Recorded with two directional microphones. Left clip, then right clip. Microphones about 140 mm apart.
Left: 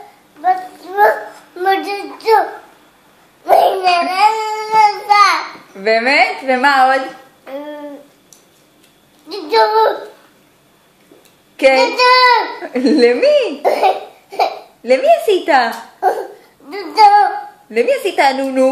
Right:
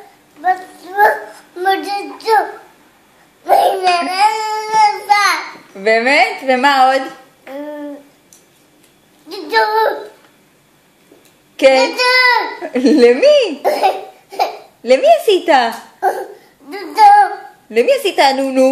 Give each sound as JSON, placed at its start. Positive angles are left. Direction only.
{"t": 0.4, "sound": "a sound", "side_deg": -10}
{"t": 1.6, "sound": "child singing", "side_deg": -10}
{"t": 3.4, "sound": "babbling", "side_deg": -10}
{"t": 4.1, "sound": "child singing", "side_deg": -10}
{"t": 5.8, "sound": "a woman's voice", "side_deg": -45}
{"t": 9.3, "sound": "a sound", "side_deg": -5}
{"t": 11.5, "sound": "child singing", "side_deg": -45}
{"t": 11.8, "sound": "a child's voice", "side_deg": -10}
{"t": 12.6, "sound": "a woman's voice", "side_deg": -45}
{"t": 13.6, "sound": "laughter", "side_deg": -5}
{"t": 14.8, "sound": "a woman's voice", "side_deg": -50}
{"t": 16.6, "sound": "babbling", "side_deg": -5}
{"t": 17.6, "sound": "a woman's voice", "side_deg": -45}